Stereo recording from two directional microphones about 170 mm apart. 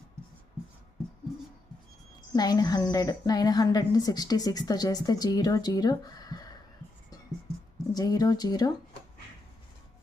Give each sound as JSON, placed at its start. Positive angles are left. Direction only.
{"t": 2.3, "sound": "a woman's voice", "side_deg": 20}
{"t": 7.9, "sound": "a woman's voice", "side_deg": 20}